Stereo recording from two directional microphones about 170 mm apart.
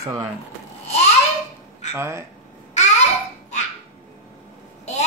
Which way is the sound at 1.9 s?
15° right (ahead or behind).